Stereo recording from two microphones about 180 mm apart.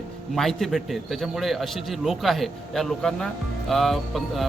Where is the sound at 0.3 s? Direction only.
Centre (ahead or behind).